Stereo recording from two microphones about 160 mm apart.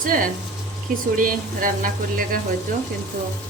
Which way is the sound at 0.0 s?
60° right (ahead or behind).